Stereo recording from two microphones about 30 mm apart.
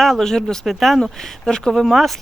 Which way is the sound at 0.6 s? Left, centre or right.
Centre.